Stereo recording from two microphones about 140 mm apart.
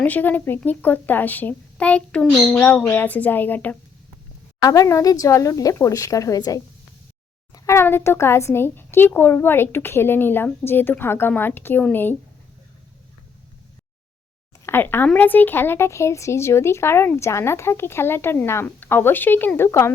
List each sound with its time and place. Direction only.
0.0 s speech: 10° left (ahead or behind)
4.6 s a woman's voice: 25° left (ahead or behind)
14.6 s speech: 15° left (ahead or behind)